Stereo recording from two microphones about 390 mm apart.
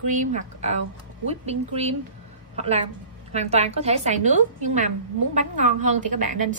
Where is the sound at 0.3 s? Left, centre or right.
Centre.